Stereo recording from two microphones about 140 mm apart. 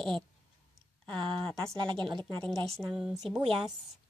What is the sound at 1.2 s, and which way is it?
Speech, 35° right (ahead or behind).